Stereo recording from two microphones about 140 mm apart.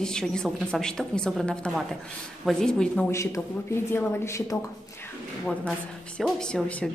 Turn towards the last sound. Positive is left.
turn(degrees=10)  # may be behind; listen again after turning